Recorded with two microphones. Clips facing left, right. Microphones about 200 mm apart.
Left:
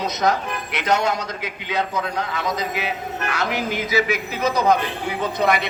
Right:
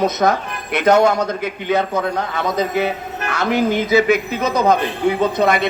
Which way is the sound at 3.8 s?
50° right (ahead or behind).